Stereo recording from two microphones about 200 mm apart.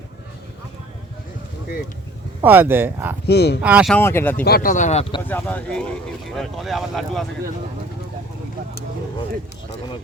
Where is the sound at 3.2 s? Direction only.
55° left (ahead or behind).